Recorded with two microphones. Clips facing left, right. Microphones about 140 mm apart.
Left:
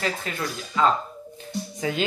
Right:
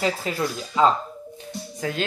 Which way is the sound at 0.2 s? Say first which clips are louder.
Right 4 dB; 30° right (ahead or behind).